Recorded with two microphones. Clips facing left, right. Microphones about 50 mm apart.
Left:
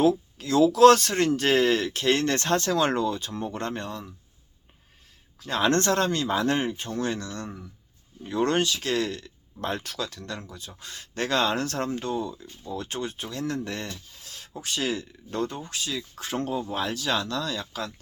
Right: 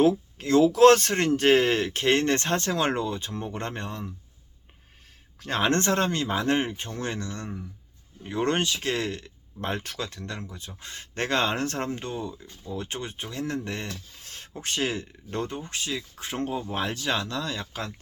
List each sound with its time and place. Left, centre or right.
0.0 s speech: right
5.4 s speech: right
5.6 s speech: right
14.2 s speech: right